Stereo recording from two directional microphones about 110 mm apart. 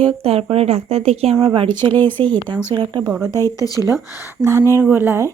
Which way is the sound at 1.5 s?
45° right (ahead or behind).